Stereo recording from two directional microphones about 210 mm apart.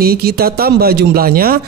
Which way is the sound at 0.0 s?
45° right (ahead or behind).